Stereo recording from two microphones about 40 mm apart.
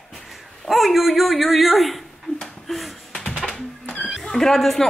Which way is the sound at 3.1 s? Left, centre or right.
Centre.